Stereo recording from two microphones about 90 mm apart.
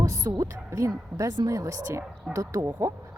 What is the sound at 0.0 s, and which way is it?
Speech, 35° right (ahead or behind).